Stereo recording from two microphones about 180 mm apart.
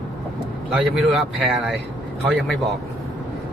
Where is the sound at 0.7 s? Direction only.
Centre (ahead or behind).